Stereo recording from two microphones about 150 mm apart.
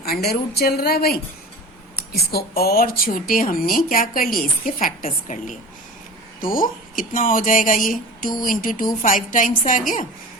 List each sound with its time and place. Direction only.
0.0 s a woman's voice: 90° left
2.3 s a woman's voice: 90° left
3.0 s a woman's voice: 70° left (ahead or behind)
6.4 s speech: 70° left (ahead or behind)